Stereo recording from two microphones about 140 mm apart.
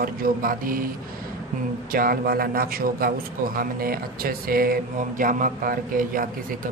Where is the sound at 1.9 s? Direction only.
90° right.